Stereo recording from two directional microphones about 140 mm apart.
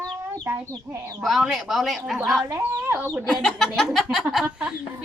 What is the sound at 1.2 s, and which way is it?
Speech, centre (ahead or behind).